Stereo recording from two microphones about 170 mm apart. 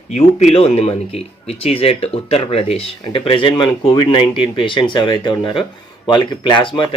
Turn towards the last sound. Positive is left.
turn(degrees=30)  # may be behind; listen again after turning